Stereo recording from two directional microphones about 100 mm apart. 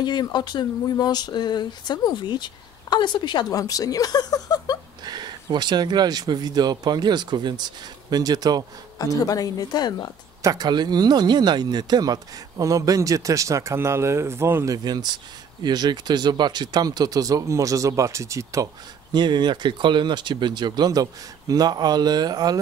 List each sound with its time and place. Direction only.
0.0 s a sound: 45° left (ahead or behind)
5.0 s speech: 45° right (ahead or behind)
8.9 s speech: 35° left (ahead or behind)
10.4 s speech: 40° right (ahead or behind)
14.9 s speech: 45° right (ahead or behind)
19.1 s speech: 50° right (ahead or behind)